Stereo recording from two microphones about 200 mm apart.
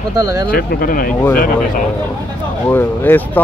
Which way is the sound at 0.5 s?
45° left (ahead or behind).